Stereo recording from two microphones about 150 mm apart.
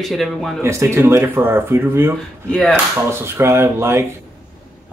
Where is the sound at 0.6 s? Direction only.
20° right (ahead or behind).